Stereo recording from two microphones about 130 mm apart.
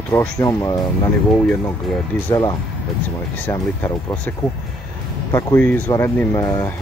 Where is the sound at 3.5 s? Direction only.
25° left (ahead or behind).